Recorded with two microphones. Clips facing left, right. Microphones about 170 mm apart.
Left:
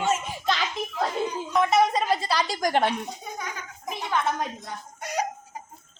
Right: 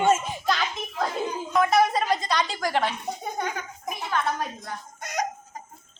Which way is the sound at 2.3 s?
35° left (ahead or behind).